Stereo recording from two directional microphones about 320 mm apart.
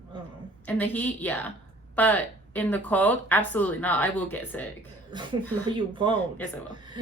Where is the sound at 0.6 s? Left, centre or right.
Centre.